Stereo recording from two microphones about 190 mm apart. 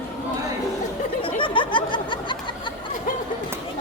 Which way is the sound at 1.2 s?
25° left (ahead or behind).